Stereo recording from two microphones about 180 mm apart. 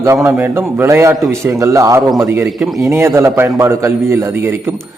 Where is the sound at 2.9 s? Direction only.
15° right (ahead or behind).